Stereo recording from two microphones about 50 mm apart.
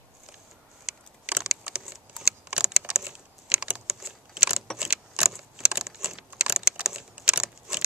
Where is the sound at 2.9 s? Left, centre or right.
Centre.